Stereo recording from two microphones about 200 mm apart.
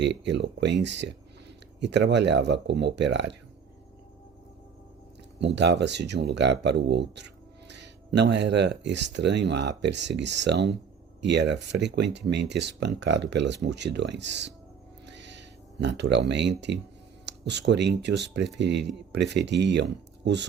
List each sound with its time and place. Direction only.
0.0 s speech: 60° right (ahead or behind)
5.4 s speech: 60° right (ahead or behind)
15.0 s a sound: 60° right (ahead or behind)
17.2 s speech: 60° right (ahead or behind)